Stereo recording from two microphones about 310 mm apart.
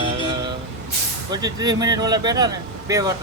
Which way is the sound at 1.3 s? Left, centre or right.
Centre.